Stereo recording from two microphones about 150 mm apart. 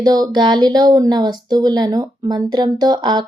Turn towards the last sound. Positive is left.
turn(degrees=-30)  # may be behind; listen again after turning